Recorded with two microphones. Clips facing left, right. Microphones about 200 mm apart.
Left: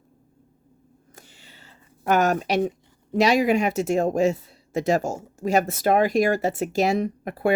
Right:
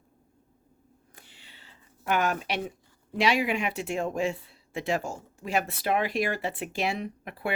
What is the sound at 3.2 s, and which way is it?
Speech, 40° left (ahead or behind).